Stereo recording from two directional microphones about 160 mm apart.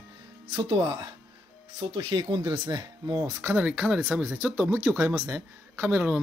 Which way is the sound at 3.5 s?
10° right (ahead or behind).